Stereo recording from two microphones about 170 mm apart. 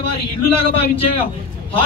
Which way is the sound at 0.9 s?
35° left (ahead or behind).